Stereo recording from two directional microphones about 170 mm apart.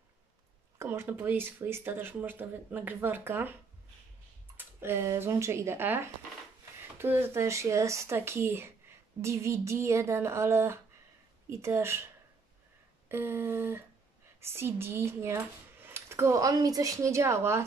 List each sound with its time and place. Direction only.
0.7 s speech: 15° right (ahead or behind)
4.6 s speech: 15° right (ahead or behind)
13.1 s speech: 15° right (ahead or behind)